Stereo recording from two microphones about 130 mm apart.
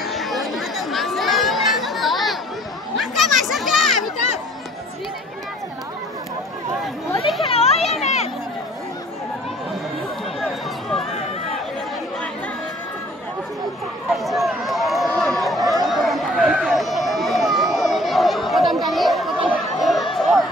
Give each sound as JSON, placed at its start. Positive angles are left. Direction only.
{"t": 0.0, "sound": "chatter", "side_deg": 0}
{"t": 3.0, "sound": "children playing", "side_deg": 0}
{"t": 7.4, "sound": "children playing", "side_deg": 50}
{"t": 10.4, "sound": "a sound", "side_deg": 0}
{"t": 14.1, "sound": "run", "side_deg": 0}